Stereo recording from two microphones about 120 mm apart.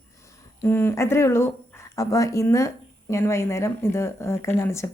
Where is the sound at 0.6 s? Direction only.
20° left (ahead or behind).